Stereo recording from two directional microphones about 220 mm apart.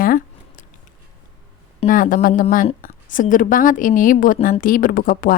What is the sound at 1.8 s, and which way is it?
A woman's voice, 40° left (ahead or behind).